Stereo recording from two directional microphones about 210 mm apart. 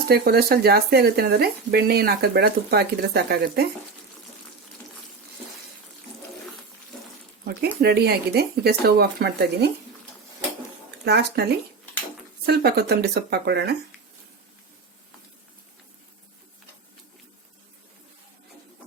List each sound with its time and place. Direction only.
0.1 s speech: 50° right (ahead or behind)
7.8 s speech: 50° right (ahead or behind)
11.0 s speech: 50° right (ahead or behind)
12.5 s speech: 50° right (ahead or behind)